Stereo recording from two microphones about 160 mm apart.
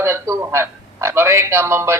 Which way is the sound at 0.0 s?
20° right (ahead or behind).